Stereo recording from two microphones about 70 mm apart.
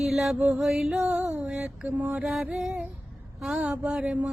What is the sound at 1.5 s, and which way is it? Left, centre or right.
Mantra, centre.